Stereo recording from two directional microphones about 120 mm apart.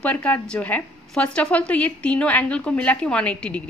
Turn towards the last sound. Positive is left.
turn(degrees=10)  # may be behind; listen again after turning